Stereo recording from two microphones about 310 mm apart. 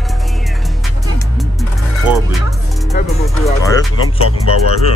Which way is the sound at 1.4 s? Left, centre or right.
Centre.